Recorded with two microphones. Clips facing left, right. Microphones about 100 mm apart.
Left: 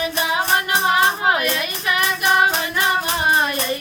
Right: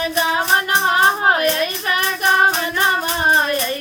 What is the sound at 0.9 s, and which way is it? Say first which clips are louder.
Music: right 2 dB; 40° right (ahead or behind).